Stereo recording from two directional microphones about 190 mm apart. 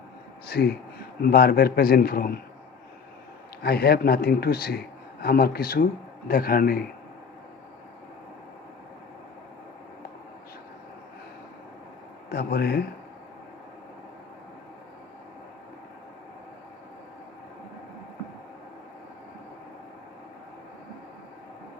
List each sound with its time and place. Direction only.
0.4 s a man's voice: 55° left (ahead or behind)
3.6 s a man's voice: 55° left (ahead or behind)
12.3 s a man's voice: 60° left (ahead or behind)